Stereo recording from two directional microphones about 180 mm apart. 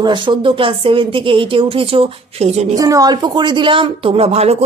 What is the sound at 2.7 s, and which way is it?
Speech, 20° right (ahead or behind).